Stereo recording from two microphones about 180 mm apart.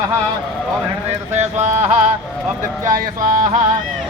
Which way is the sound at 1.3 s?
40° right (ahead or behind).